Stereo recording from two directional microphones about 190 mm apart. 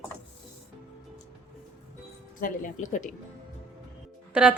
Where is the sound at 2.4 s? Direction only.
45° left (ahead or behind).